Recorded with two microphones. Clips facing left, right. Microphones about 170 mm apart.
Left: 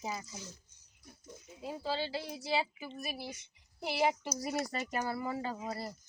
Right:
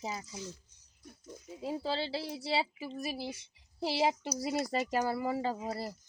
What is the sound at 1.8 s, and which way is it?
Speech, 30° right (ahead or behind).